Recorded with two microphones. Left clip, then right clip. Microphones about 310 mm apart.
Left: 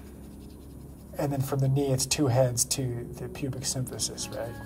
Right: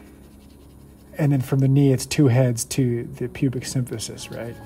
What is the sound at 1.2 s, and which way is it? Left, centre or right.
Speech, right.